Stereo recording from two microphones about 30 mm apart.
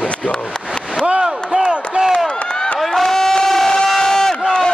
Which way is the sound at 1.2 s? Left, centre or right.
Centre.